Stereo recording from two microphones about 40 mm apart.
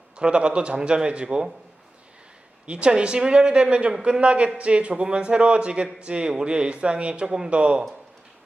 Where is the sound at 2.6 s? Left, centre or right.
Right.